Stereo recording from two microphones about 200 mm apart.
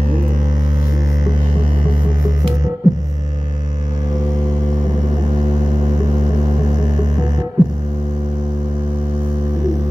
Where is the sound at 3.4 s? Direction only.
20° right (ahead or behind).